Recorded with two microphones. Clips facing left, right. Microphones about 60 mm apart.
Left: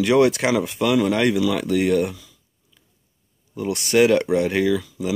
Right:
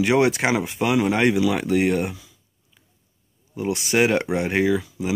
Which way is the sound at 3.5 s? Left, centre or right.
Centre.